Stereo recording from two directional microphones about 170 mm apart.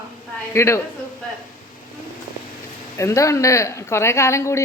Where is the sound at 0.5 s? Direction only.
15° left (ahead or behind).